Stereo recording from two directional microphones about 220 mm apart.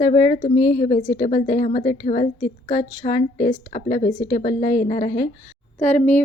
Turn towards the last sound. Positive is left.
turn(degrees=35)  # may be behind; listen again after turning